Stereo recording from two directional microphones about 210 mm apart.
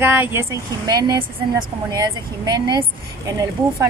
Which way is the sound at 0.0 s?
10° right (ahead or behind).